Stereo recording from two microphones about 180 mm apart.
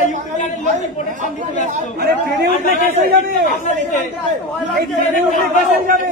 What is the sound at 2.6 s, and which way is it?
Speech, 50° left (ahead or behind).